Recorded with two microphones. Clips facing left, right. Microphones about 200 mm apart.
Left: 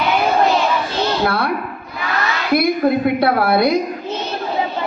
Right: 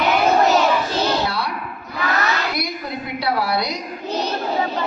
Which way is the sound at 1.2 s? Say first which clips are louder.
Left 5 dB; 55° left (ahead or behind).